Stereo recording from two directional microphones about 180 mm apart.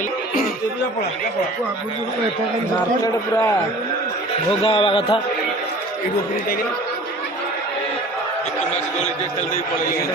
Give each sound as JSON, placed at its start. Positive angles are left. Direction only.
{"t": 3.0, "sound": "a man's voice", "side_deg": 15}
{"t": 4.6, "sound": "speech", "side_deg": 30}